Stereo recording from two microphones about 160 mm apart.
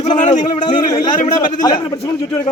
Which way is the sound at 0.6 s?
25° left (ahead or behind).